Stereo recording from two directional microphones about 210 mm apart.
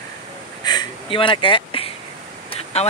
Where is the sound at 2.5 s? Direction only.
30° left (ahead or behind).